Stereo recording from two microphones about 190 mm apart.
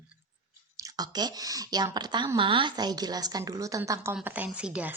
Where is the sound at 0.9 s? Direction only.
20° right (ahead or behind).